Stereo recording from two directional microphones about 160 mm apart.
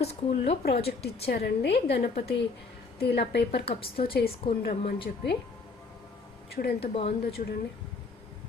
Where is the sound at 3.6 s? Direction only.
35° left (ahead or behind).